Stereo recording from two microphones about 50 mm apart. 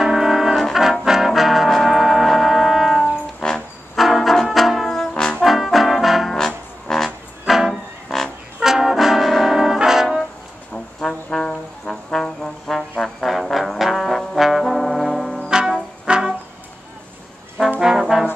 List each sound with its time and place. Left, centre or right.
0.0 s brass instrument: centre
1.0 s music: centre
3.0 s brass instrument: centre
3.9 s brass instrument: centre
5.4 s trombone: centre
6.3 s trombone: centre
7.4 s music: centre
8.5 s brass instrument: centre
10.7 s brass instrument: centre
12.1 s trombone: centre
15.4 s music: centre
17.7 s brass instrument: centre